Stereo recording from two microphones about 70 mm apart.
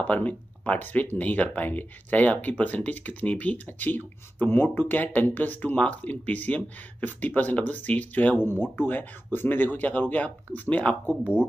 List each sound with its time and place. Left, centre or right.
0.0 s speech: left